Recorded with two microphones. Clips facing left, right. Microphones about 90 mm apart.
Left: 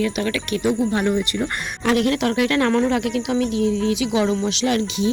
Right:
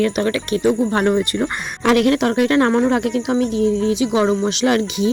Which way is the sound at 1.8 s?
75° right (ahead or behind).